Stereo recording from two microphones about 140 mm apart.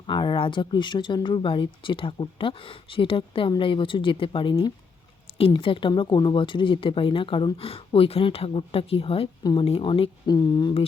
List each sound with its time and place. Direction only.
0.1 s speech: 35° left (ahead or behind)
9.4 s speech: 30° left (ahead or behind)
9.6 s speech: 40° left (ahead or behind)